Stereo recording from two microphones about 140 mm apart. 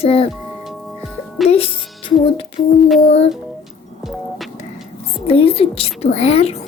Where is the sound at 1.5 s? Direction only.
40° left (ahead or behind).